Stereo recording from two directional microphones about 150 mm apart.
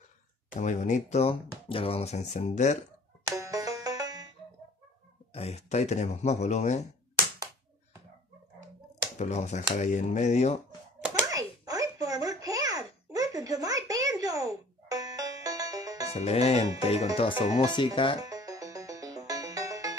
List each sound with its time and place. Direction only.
0.6 s speech: 55° left (ahead or behind)
3.3 s music: 20° right (ahead or behind)
5.3 s speech: 45° left (ahead or behind)
9.2 s speech: 50° left (ahead or behind)
11.2 s a sound: 25° right (ahead or behind)
16.1 s speech: 45° left (ahead or behind)
18.2 s music: 25° right (ahead or behind)